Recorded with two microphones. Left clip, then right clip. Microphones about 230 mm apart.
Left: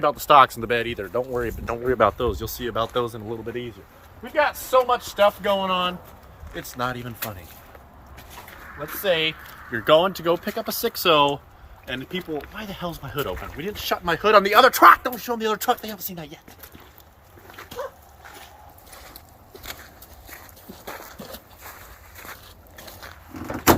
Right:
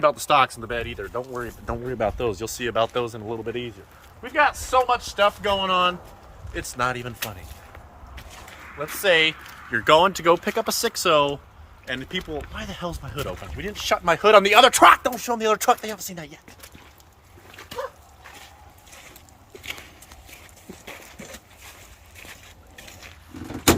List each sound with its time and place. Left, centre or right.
0.0 s speech: centre
0.7 s speech: left
1.6 s speech: left
2.0 s speech: centre
9.0 s speech: centre
14.1 s speech: right; by 16.4 s centre